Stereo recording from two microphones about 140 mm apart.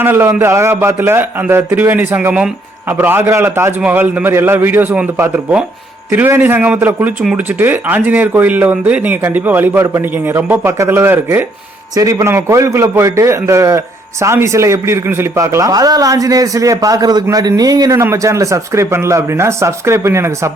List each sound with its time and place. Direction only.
0.0 s a man's voice: 15° right (ahead or behind)